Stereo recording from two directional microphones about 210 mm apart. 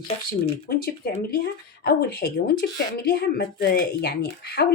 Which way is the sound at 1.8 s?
50° left (ahead or behind).